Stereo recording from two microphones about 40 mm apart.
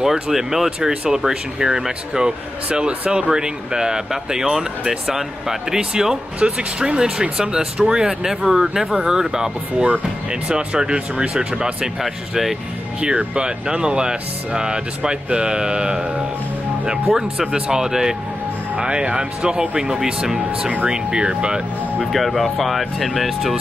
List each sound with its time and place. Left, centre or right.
0.0 s speech: centre
12.0 s speech: centre
13.0 s speech: right
22.1 s speech: centre